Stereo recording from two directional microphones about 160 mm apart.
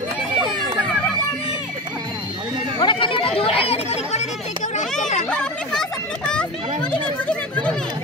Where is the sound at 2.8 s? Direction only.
30° left (ahead or behind).